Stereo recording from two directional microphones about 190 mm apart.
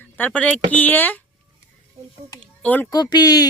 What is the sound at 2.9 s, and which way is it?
Speech, 20° left (ahead or behind).